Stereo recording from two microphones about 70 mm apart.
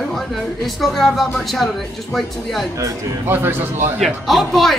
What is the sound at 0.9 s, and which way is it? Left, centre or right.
Speech, centre.